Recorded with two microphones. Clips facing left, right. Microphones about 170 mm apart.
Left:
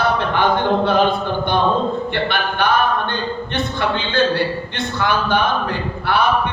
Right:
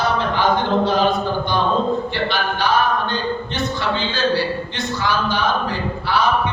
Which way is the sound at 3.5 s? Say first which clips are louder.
Left 4 dB; 55° left (ahead or behind).